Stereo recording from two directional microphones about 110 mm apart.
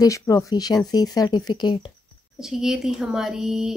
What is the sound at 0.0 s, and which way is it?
Speech, 30° left (ahead or behind).